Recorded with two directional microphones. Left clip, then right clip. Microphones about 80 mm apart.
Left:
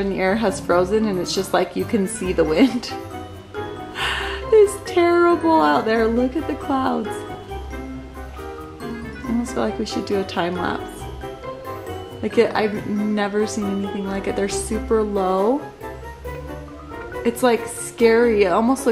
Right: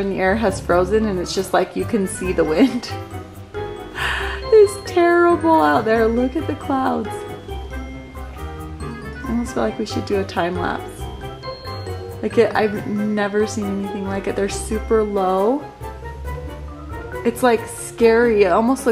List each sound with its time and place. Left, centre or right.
0.0 s speech: centre
3.9 s music: right
9.4 s speech: centre
12.2 s speech: centre
17.2 s speech: right